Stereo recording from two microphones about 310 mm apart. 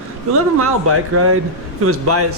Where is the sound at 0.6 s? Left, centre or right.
Right.